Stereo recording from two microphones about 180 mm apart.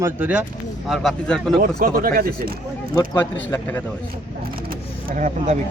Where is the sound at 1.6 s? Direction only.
50° right (ahead or behind).